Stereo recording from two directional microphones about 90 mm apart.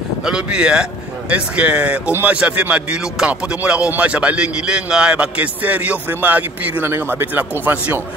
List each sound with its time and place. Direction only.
0.2 s speech: 10° right (ahead or behind)